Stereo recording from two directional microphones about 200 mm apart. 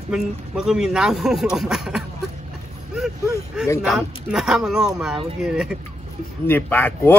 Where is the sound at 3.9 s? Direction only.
Centre (ahead or behind).